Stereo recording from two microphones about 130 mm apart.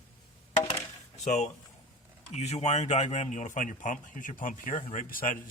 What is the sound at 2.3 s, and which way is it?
Speech, 55° left (ahead or behind).